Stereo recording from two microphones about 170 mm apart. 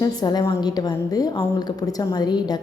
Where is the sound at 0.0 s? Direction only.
25° left (ahead or behind).